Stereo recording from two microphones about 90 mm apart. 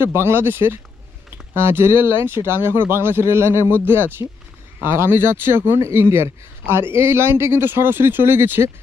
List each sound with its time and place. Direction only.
0.0 s speech: 25° right (ahead or behind)